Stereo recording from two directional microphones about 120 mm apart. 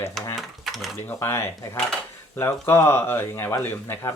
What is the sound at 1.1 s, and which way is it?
Speech, 20° left (ahead or behind).